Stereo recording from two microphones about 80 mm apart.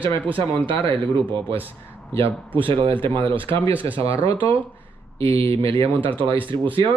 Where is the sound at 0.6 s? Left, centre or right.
Right.